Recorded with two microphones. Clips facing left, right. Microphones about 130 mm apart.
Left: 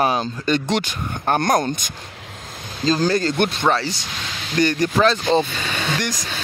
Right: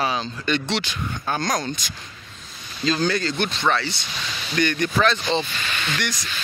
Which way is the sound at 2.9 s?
35° left (ahead or behind).